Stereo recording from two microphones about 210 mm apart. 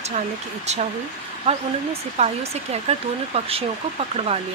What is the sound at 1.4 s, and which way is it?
Speech, 30° right (ahead or behind).